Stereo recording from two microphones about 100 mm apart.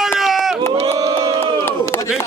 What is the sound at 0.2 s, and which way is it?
Crowd, 5° right (ahead or behind).